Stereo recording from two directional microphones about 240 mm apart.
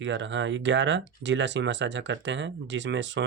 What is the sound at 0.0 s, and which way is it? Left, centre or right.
Speech, right.